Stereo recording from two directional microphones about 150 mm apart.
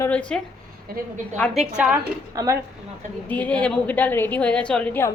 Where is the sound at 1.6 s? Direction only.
5° right (ahead or behind).